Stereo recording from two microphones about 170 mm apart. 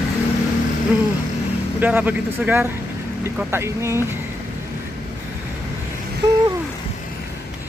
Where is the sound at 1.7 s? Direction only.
10° right (ahead or behind).